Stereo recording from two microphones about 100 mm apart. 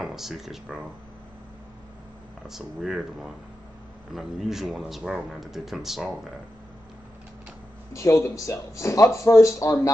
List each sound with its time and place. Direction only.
0.0 s speech: 5° right (ahead or behind)
2.4 s speech: 5° right (ahead or behind)
7.9 s speech: 30° left (ahead or behind)